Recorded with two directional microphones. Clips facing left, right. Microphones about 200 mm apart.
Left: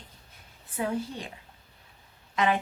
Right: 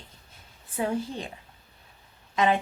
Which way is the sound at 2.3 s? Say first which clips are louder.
Right 2 dB; 25° right (ahead or behind).